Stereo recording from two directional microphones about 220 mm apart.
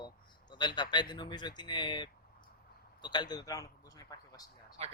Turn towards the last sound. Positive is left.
turn(degrees=-30)  # may be behind; listen again after turning